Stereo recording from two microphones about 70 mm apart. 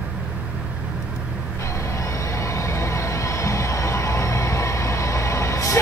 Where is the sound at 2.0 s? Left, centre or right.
Left.